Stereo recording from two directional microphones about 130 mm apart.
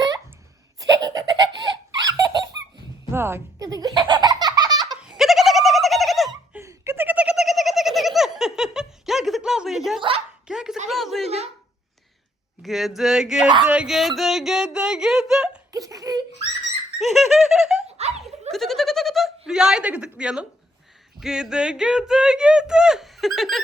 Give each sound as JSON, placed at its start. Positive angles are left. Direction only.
{"t": 0.8, "sound": "laughter", "side_deg": -30}
{"t": 3.1, "sound": "baby laughter", "side_deg": -20}
{"t": 4.9, "sound": "giggle", "side_deg": -5}
{"t": 6.5, "sound": "giggle", "side_deg": -20}
{"t": 10.4, "sound": "bow-wow", "side_deg": -5}
{"t": 10.8, "sound": "a sound", "side_deg": 0}
{"t": 12.6, "sound": "speech", "side_deg": 0}
{"t": 13.7, "sound": "a sound", "side_deg": -5}
{"t": 15.7, "sound": "laughter", "side_deg": -30}
{"t": 17.0, "sound": "giggle", "side_deg": 0}
{"t": 17.8, "sound": "a sound", "side_deg": -55}
{"t": 18.5, "sound": "bleat", "side_deg": 0}
{"t": 21.2, "sound": "speech", "side_deg": -5}